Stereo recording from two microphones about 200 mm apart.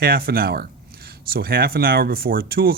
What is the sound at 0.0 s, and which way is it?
Speech, 50° right (ahead or behind).